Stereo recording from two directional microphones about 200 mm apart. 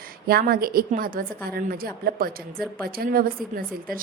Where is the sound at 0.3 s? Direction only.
50° right (ahead or behind).